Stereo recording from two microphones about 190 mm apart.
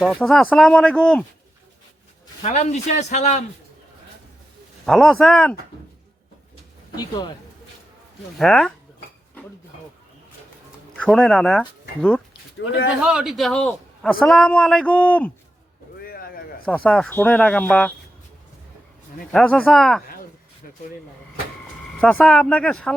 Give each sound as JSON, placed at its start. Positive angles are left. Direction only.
{"t": 0.0, "sound": "a man's voice", "side_deg": 0}
{"t": 2.4, "sound": "speech", "side_deg": 35}
{"t": 4.9, "sound": "a man's voice", "side_deg": 0}
{"t": 6.9, "sound": "speech", "side_deg": 20}
{"t": 8.4, "sound": "a man's voice", "side_deg": 5}
{"t": 11.0, "sound": "speech", "side_deg": 5}
{"t": 13.0, "sound": "a man's voice", "side_deg": -5}
{"t": 16.0, "sound": "a sound", "side_deg": 50}
{"t": 16.6, "sound": "speech", "side_deg": 5}
{"t": 19.3, "sound": "a man's voice", "side_deg": 5}
{"t": 22.0, "sound": "a man's voice", "side_deg": 5}